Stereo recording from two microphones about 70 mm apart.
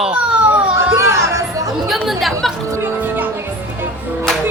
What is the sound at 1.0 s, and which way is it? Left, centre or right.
Music, right.